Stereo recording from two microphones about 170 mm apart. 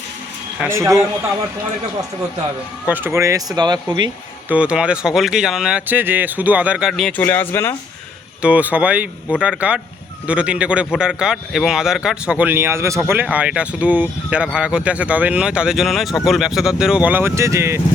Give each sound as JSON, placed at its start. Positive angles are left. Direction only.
{"t": 0.6, "sound": "speech", "side_deg": -15}
{"t": 2.8, "sound": "speech", "side_deg": -10}
{"t": 4.4, "sound": "speech", "side_deg": -5}
{"t": 7.2, "sound": "speech", "side_deg": 10}
{"t": 8.4, "sound": "speech", "side_deg": -10}